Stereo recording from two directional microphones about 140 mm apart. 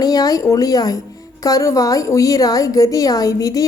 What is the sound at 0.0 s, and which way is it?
A woman's voice, 25° left (ahead or behind).